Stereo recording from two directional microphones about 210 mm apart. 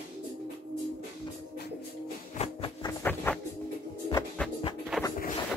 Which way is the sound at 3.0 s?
10° left (ahead or behind).